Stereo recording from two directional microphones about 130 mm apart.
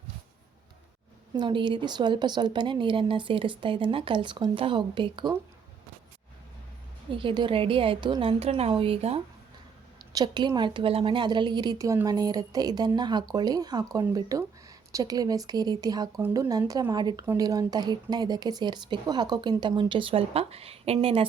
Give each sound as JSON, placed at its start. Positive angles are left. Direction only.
{"t": 1.4, "sound": "speech", "side_deg": -35}
{"t": 7.1, "sound": "a woman's voice", "side_deg": -40}
{"t": 10.1, "sound": "speech", "side_deg": -30}